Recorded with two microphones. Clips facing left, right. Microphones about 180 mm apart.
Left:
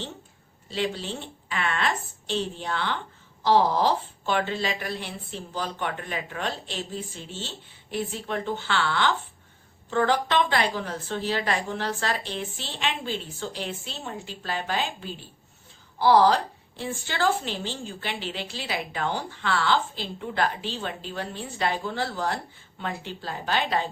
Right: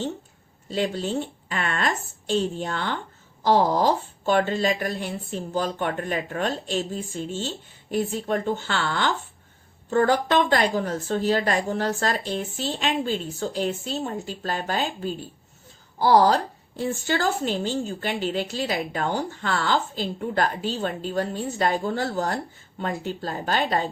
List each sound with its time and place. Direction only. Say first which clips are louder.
0.7 s a woman's voice: right 4 dB; 45° right (ahead or behind)